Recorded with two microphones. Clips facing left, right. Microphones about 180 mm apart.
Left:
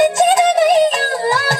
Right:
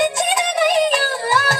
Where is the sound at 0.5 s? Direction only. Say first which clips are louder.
Left 4 dB; 40° left (ahead or behind).